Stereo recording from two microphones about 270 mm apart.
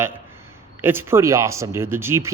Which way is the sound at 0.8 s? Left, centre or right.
Centre.